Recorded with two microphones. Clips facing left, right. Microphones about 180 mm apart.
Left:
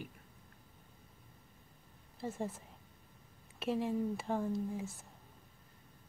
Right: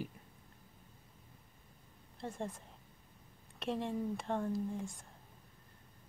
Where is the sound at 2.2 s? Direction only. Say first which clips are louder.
Left 2 dB; 5° left (ahead or behind).